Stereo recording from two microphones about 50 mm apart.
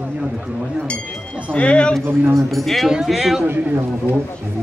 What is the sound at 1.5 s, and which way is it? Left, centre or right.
Speech, left.